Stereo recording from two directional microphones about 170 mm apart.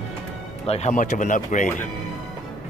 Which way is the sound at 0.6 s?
40° left (ahead or behind).